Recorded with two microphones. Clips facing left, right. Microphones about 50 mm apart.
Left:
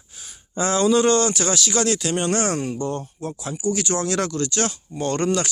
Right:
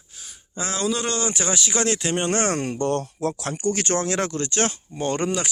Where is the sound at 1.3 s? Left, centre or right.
Right.